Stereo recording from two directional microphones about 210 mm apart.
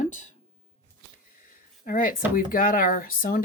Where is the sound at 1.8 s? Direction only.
40° left (ahead or behind).